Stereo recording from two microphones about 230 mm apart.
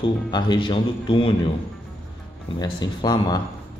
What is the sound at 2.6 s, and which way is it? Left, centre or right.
Speech, centre.